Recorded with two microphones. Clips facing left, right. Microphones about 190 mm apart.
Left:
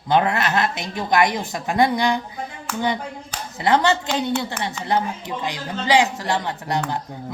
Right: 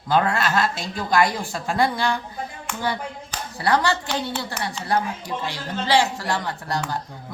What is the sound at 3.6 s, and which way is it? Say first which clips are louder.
A woman's voice: left 3 dB; 20° left (ahead or behind).